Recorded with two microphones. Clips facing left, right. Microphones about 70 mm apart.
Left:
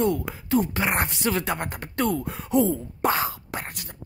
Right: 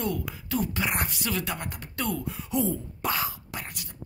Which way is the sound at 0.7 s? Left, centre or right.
Left.